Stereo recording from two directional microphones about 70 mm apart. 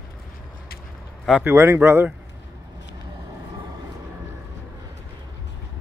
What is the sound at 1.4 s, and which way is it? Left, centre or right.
Speech, right.